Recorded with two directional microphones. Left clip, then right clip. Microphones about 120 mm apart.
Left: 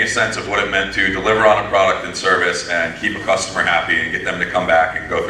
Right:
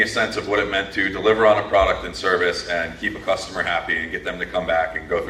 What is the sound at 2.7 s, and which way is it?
Speech, 45° left (ahead or behind).